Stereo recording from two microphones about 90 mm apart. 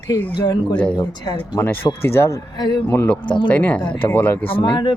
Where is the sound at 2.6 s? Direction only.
50° left (ahead or behind).